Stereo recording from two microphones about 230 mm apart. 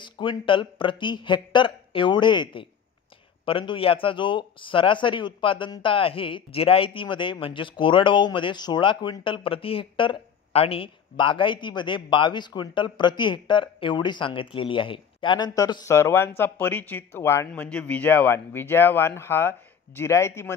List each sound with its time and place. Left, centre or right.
0.0 s a man's voice: left